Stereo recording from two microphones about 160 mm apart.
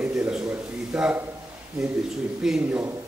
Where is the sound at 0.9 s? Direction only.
5° right (ahead or behind).